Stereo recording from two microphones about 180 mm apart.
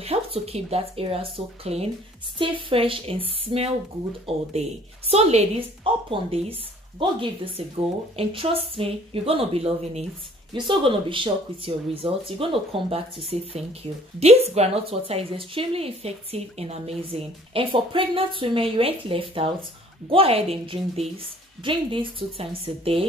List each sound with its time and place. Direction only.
0.0 s a woman's voice: 35° right (ahead or behind)